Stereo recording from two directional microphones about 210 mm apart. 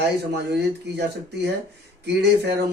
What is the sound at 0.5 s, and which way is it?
Speech, 50° right (ahead or behind).